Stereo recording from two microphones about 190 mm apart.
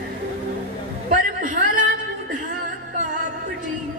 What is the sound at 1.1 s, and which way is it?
Chatter, 45° right (ahead or behind).